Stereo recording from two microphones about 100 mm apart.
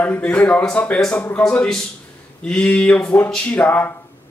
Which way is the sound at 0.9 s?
10° left (ahead or behind).